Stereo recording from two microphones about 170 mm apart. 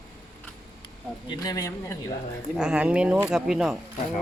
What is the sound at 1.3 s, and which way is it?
Speech, 25° left (ahead or behind).